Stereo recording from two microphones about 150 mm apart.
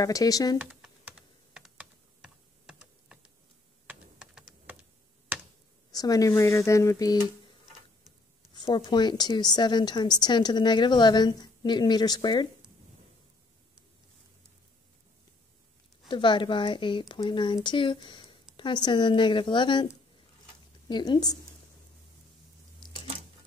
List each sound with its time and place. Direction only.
0.0 s a woman's voice: 25° left (ahead or behind)
0.6 s computer keyboard: 5° right (ahead or behind)
1.5 s typing: 5° right (ahead or behind)
5.9 s a woman's voice: 25° left (ahead or behind)
8.5 s a woman's voice: 30° left (ahead or behind)
16.1 s speech: 35° left (ahead or behind)
20.9 s a woman's voice: 30° left (ahead or behind)
22.8 s a sound: 30° left (ahead or behind)